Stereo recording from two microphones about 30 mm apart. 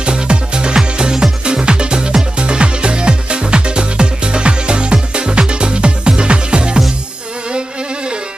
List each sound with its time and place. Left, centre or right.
0.0 s music: right